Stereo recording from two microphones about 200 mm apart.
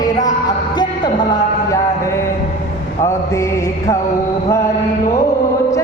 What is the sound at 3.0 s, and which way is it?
Mantra, 15° left (ahead or behind).